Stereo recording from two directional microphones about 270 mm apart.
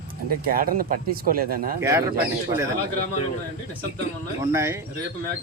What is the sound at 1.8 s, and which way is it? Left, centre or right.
Speech, centre.